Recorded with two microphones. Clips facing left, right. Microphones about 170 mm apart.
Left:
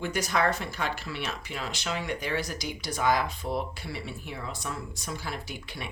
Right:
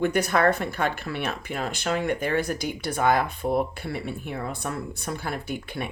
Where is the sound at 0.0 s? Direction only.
55° right (ahead or behind).